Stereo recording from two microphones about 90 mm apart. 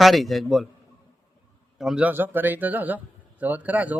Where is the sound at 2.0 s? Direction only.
20° right (ahead or behind).